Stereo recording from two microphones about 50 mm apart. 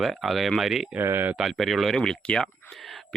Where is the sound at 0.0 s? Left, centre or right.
Centre.